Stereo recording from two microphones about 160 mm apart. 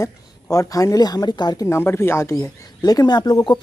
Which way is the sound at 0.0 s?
20° left (ahead or behind).